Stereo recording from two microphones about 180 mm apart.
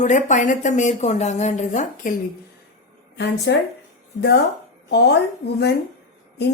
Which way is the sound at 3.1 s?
70° left (ahead or behind).